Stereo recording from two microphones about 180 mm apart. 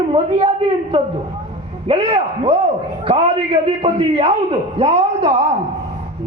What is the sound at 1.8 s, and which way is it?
A man's voice, 35° right (ahead or behind).